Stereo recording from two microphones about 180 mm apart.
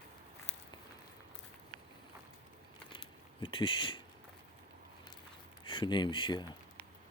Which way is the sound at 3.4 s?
30° left (ahead or behind).